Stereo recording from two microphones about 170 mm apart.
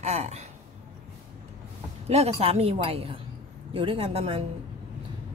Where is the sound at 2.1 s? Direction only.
35° right (ahead or behind).